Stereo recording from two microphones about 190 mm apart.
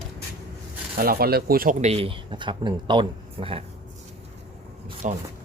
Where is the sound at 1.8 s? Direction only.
30° right (ahead or behind).